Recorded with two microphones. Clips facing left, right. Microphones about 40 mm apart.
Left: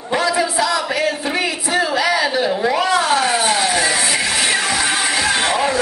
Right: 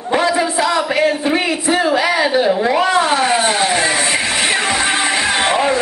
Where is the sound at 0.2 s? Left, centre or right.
Right.